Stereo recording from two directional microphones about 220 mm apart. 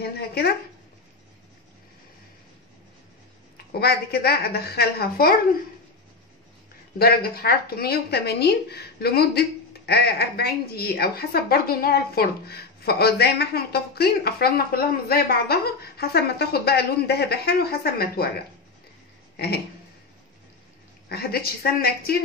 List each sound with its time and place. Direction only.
0.0 s speech: 45° left (ahead or behind)
3.5 s speech: 45° left (ahead or behind)
7.0 s speech: 45° left (ahead or behind)
19.3 s a sound: 45° left (ahead or behind)
21.1 s speech: 45° left (ahead or behind)